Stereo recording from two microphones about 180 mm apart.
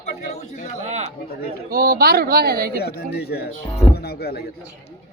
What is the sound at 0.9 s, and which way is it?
Chatter, 35° right (ahead or behind).